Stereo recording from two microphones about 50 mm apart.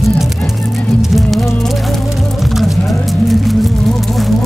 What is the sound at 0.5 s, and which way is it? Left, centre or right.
Music, centre.